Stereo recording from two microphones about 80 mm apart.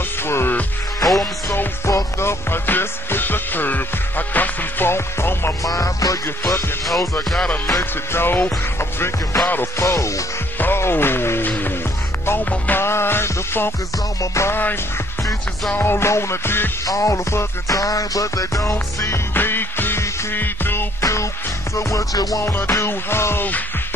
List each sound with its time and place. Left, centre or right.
0.3 s music: left
1.9 s music: left
5.6 s music: left
7.2 s music: centre
8.1 s music: left
10.6 s speech: left
12.3 s music: left
15.8 s music: left
16.8 s music: left
17.7 s music: left
19.3 s music: left
21.0 s music: left
22.4 s music: left